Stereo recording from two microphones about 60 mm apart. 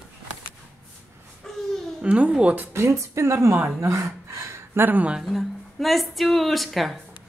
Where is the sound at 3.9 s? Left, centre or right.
Right.